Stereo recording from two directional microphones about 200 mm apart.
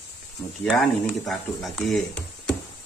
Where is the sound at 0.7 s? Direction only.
Centre (ahead or behind).